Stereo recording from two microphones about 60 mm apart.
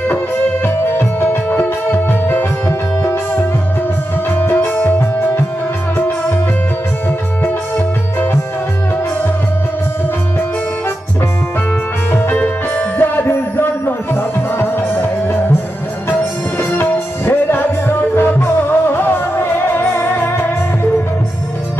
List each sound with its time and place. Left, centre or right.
0.9 s music: left
12.1 s music: left
16.1 s music: left
16.8 s music: left